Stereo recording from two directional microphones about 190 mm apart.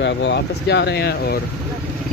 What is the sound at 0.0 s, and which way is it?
Speech, 65° left (ahead or behind).